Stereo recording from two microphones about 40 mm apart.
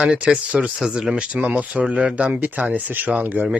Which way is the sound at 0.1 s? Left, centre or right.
Right.